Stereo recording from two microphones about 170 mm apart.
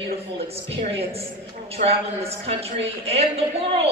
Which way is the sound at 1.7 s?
35° right (ahead or behind).